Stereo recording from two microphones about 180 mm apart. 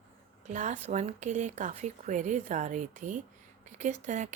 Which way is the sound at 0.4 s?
40° right (ahead or behind).